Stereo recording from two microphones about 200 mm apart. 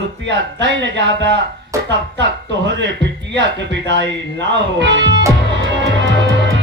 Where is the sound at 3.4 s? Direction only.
60° right (ahead or behind).